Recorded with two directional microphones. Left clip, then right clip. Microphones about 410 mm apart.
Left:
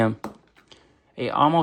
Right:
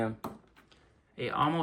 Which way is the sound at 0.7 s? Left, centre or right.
Centre.